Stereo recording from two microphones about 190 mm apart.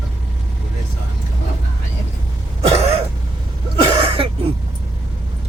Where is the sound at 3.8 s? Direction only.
30° right (ahead or behind).